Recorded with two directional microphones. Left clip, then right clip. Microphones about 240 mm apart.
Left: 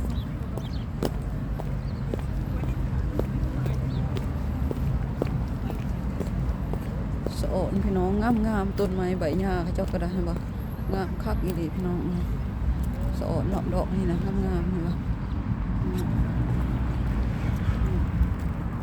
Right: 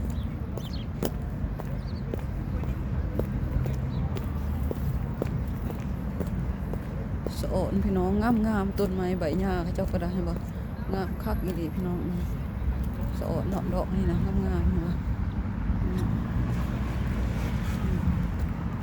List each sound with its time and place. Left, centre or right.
7.3 s speech: centre
13.2 s speech: centre